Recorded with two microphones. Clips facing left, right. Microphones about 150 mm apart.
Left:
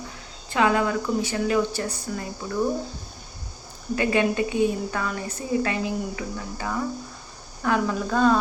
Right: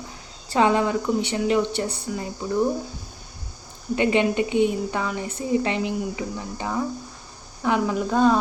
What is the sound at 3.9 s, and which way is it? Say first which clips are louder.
Speech: right 2 dB; 20° right (ahead or behind).